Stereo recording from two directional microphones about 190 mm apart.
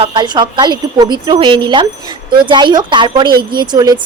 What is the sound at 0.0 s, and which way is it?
A woman's voice, 25° right (ahead or behind).